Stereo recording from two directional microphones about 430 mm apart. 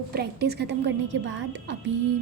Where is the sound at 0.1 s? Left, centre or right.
Right.